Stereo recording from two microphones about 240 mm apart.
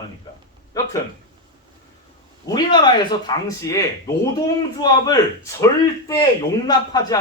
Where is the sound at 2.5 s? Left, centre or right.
Centre.